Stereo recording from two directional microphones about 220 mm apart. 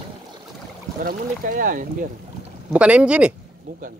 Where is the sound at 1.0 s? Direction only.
40° right (ahead or behind).